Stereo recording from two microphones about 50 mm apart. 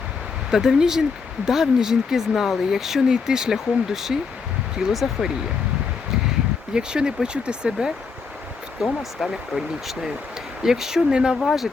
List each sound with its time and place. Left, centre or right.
0.5 s speech: centre
6.7 s speech: centre
8.8 s speech: centre
11.3 s speech: centre